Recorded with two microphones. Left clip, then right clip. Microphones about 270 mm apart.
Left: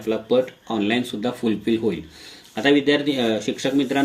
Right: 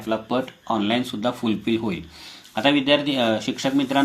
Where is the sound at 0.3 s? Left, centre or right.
Right.